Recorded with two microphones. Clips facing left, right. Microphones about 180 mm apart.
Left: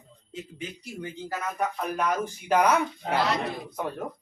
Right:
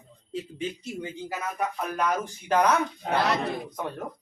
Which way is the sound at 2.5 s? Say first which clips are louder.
Even; 5° left (ahead or behind).